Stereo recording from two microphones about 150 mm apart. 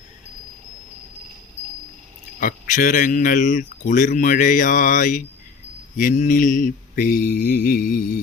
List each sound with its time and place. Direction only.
2.4 s speech: 60° left (ahead or behind)